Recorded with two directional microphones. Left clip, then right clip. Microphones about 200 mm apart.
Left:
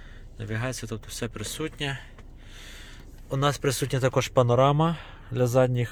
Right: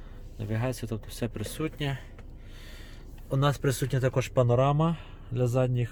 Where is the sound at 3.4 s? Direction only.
Centre (ahead or behind).